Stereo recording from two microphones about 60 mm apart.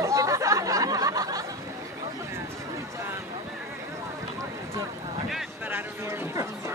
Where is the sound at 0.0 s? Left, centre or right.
Right.